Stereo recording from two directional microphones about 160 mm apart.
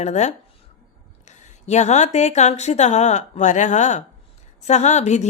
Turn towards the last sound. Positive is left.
turn(degrees=45)  # may be behind; listen again after turning